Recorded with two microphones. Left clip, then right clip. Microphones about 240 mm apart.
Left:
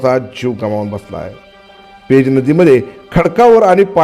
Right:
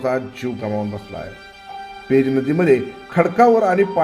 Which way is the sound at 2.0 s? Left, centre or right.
Left.